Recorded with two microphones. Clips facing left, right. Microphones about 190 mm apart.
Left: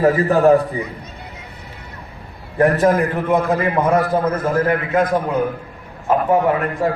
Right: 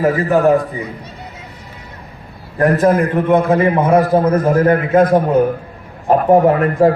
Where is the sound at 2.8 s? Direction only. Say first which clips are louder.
Right 3 dB; centre (ahead or behind).